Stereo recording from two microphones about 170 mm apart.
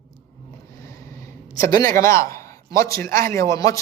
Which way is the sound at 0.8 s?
15° left (ahead or behind).